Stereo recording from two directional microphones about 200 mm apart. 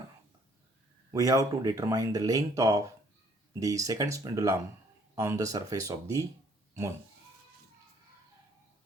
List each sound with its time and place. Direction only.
1.1 s speech: 15° right (ahead or behind)